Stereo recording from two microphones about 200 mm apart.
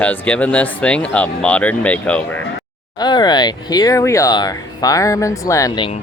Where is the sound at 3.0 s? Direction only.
20° left (ahead or behind).